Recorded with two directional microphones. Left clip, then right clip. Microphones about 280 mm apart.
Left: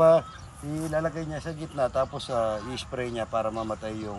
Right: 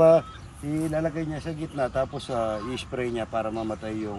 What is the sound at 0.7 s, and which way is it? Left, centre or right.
Speech, centre.